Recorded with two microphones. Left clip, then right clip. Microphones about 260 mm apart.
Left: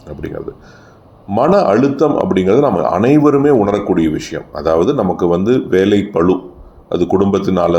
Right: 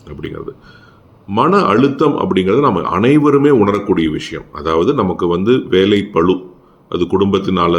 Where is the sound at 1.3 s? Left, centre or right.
Centre.